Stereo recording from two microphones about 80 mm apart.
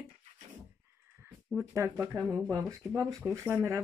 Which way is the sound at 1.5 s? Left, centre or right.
Right.